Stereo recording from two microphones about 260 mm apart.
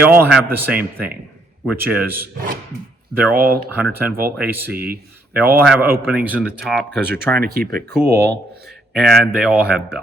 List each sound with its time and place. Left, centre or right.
0.1 s speech: centre
3.3 s speech: right
3.8 s speech: centre
6.9 s speech: right
8.9 s speech: centre